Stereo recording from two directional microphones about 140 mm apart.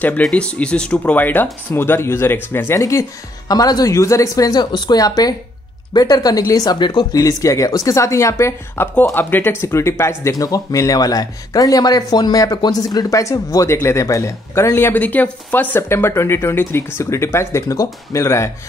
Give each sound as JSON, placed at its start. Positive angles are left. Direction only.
{"t": 0.0, "sound": "speech", "side_deg": 10}